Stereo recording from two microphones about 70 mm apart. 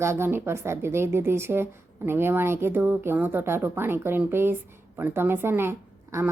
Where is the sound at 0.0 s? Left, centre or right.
Right.